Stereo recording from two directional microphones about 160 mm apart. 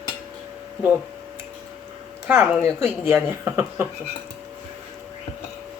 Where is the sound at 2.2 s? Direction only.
10° right (ahead or behind).